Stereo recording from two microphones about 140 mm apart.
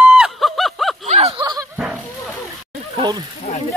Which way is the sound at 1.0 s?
55° right (ahead or behind).